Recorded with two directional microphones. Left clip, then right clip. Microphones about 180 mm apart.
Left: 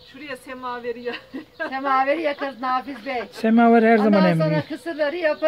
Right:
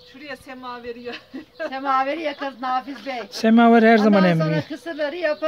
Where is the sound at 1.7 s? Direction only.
20° right (ahead or behind).